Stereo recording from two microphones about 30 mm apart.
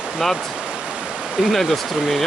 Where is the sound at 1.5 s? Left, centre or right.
Centre.